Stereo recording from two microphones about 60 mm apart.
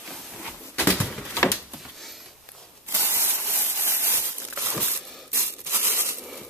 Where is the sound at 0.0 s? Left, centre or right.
Centre.